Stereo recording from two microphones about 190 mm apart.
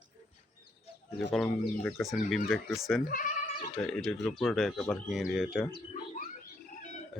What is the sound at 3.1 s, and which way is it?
Bleat, 45° left (ahead or behind).